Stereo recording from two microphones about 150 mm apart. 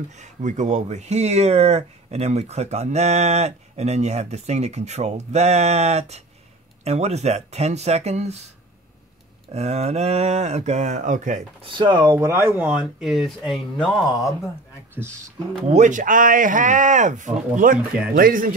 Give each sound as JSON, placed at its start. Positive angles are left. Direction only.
{"t": 0.2, "sound": "speech", "side_deg": -55}
{"t": 9.5, "sound": "speech", "side_deg": -45}
{"t": 11.6, "sound": "speech", "side_deg": -30}
{"t": 15.7, "sound": "speech", "side_deg": -55}
{"t": 18.1, "sound": "speech", "side_deg": -70}